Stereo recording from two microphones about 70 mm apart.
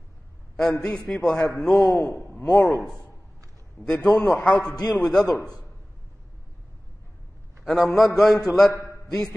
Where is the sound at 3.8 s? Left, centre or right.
Centre.